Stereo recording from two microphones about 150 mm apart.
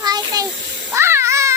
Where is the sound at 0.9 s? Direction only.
20° right (ahead or behind).